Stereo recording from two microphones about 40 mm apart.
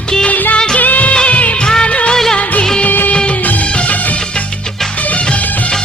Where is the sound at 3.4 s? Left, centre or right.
Left.